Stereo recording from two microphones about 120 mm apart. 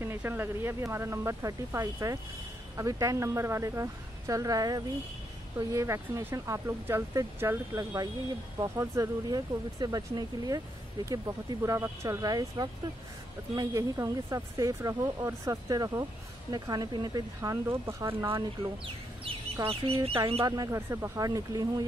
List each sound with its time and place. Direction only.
0.0 s speech: 20° right (ahead or behind)
19.2 s speech: 50° right (ahead or behind)
20.4 s speech: 30° right (ahead or behind)